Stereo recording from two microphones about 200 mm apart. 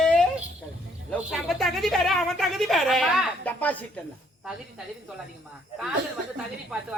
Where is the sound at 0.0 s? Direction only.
5° left (ahead or behind).